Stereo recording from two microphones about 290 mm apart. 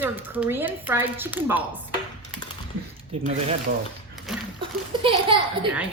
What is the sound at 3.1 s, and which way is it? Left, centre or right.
Speech, right.